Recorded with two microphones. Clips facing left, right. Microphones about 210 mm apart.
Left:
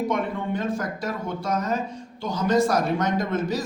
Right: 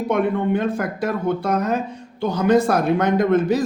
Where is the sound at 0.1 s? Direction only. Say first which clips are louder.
Right 7 dB; 60° right (ahead or behind).